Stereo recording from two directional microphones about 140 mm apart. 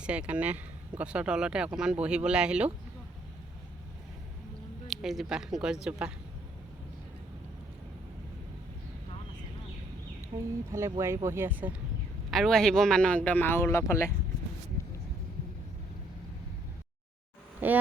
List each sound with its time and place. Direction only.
0.0 s speech: 5° right (ahead or behind)
4.9 s speech: centre (ahead or behind)
10.2 s speech: 20° right (ahead or behind)
12.3 s a man's voice: centre (ahead or behind); by 14.1 s 20° left (ahead or behind)
14.8 s vehicle: 20° left (ahead or behind)
17.6 s speech: 15° right (ahead or behind)